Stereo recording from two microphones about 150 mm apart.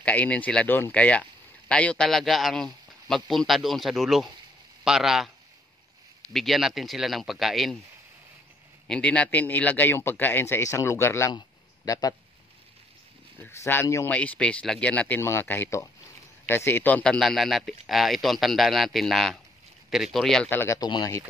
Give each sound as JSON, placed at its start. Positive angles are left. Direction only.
{"t": 0.0, "sound": "speech", "side_deg": 10}
{"t": 6.3, "sound": "speech", "side_deg": 0}
{"t": 8.8, "sound": "speech", "side_deg": 5}
{"t": 11.3, "sound": "a sound", "side_deg": 25}
{"t": 13.4, "sound": "speech", "side_deg": 15}
{"t": 20.4, "sound": "speech", "side_deg": 15}